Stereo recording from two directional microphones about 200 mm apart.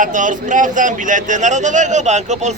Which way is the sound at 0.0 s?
40° right (ahead or behind).